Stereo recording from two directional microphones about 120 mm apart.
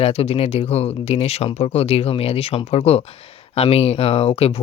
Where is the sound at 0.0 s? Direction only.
55° left (ahead or behind).